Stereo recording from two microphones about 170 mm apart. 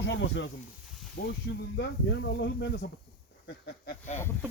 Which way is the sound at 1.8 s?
80° left.